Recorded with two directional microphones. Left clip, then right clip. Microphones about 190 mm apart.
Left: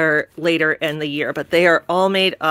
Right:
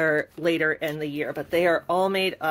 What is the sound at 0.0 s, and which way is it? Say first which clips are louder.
Speech: left 6 dB; 40° left (ahead or behind).